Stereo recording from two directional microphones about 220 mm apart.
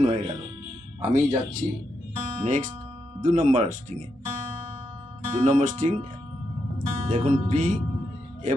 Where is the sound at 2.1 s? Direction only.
30° right (ahead or behind).